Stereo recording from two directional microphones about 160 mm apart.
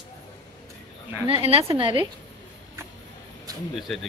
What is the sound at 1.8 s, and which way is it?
Speech, 30° right (ahead or behind).